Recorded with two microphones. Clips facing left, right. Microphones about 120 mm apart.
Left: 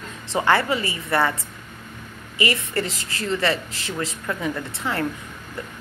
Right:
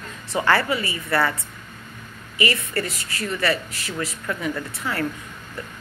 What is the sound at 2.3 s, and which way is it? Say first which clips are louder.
Speech: even; 25° left (ahead or behind).